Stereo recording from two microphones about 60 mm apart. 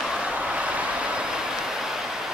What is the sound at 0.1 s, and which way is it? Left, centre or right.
Vehicle, centre.